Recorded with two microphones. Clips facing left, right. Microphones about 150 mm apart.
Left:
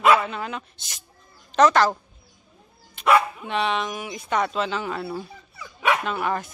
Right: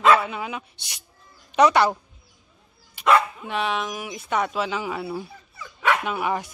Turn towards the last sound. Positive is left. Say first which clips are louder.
# even
turn(degrees=-10)  # may be behind; listen again after turning